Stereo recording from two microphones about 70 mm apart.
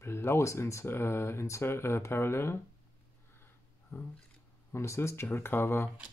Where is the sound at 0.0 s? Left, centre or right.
Left.